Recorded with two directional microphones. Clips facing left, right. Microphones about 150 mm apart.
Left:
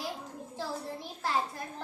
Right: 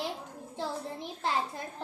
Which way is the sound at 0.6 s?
20° right (ahead or behind).